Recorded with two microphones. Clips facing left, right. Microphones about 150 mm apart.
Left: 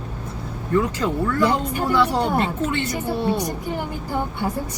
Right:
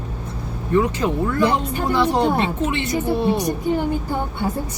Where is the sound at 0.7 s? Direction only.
20° right (ahead or behind).